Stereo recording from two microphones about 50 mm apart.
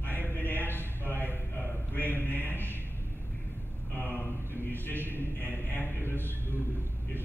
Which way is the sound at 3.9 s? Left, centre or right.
Left.